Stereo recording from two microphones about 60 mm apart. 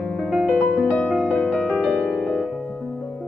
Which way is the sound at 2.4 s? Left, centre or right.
Centre.